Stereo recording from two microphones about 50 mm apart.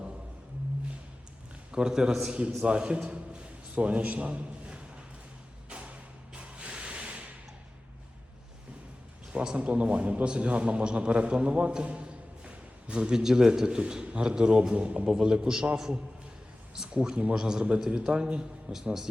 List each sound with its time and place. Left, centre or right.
1.7 s a man's voice: centre
5.6 s a sound: right
9.3 s a man's voice: centre
16.7 s a man's voice: centre